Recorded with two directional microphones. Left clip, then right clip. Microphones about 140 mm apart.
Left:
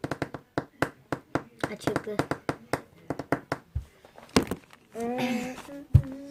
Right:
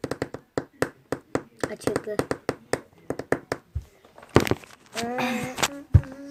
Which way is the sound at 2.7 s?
75° right (ahead or behind).